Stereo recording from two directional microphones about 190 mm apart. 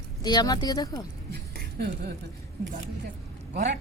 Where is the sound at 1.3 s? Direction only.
60° right (ahead or behind).